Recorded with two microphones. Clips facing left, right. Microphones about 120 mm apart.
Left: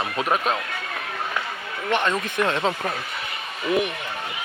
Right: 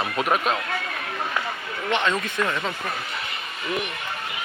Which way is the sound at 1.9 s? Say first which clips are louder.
Left 1 dB; 10° left (ahead or behind).